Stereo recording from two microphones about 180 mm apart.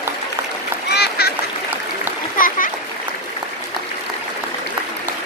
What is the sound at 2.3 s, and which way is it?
Splash, 50° left (ahead or behind).